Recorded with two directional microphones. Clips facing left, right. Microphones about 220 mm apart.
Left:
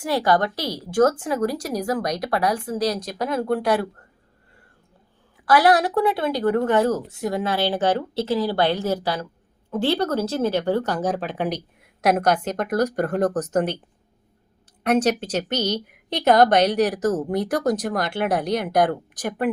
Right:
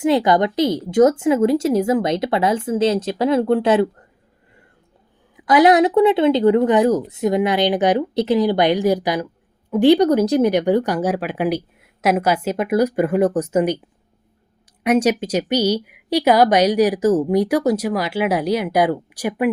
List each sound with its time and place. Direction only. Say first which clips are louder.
0.0 s speech: right 5 dB; 20° right (ahead or behind)
5.5 s speech: right 5 dB; 20° right (ahead or behind)
14.8 s speech: right 3 dB; 10° right (ahead or behind)